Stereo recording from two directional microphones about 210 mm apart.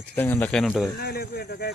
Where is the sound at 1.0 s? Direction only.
45° left (ahead or behind).